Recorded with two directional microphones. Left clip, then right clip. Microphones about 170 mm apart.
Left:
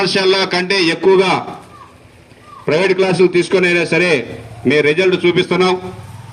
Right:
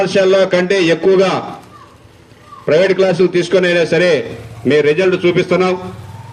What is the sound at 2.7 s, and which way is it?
A man's voice, 25° left (ahead or behind).